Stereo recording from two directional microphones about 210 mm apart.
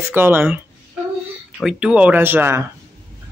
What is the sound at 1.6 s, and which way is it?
Speech, 5° right (ahead or behind).